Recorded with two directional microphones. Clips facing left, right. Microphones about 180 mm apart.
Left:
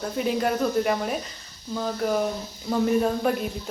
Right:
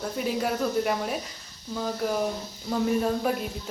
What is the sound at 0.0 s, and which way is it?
A woman's voice, centre (ahead or behind).